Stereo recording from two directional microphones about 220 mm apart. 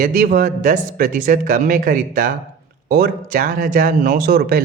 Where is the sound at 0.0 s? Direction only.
40° right (ahead or behind).